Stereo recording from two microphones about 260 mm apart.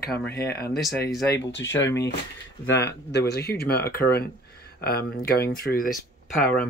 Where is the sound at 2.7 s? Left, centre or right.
Left.